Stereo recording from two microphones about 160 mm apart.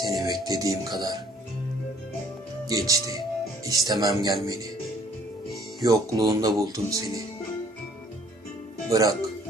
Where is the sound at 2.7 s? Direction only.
20° right (ahead or behind).